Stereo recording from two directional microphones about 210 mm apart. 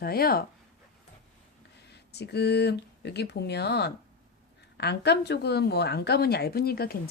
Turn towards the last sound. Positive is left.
turn(degrees=45)  # may be behind; listen again after turning